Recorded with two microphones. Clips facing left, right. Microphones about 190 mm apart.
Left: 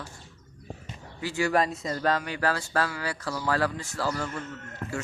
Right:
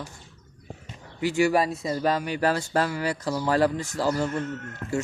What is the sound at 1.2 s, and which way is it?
Speech, 15° right (ahead or behind).